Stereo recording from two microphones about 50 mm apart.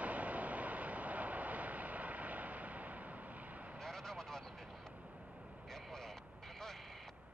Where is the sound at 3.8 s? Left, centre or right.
Centre.